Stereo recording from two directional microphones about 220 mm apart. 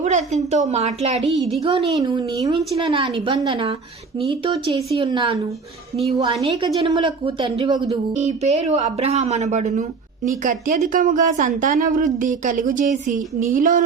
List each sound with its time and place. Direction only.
0.0 s speech: 30° right (ahead or behind)
1.4 s a woman's voice: centre (ahead or behind)
1.6 s speech: 20° right (ahead or behind); by 13.8 s 35° right (ahead or behind)